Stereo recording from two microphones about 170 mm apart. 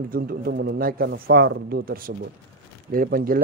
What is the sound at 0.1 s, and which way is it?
Speech, 60° right (ahead or behind).